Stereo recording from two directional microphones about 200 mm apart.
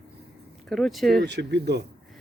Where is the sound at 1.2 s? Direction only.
60° right (ahead or behind).